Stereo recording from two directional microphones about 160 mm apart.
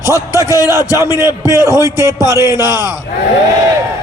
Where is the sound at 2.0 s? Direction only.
20° left (ahead or behind).